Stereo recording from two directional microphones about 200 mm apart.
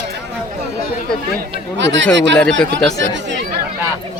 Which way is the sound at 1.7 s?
65° right (ahead or behind).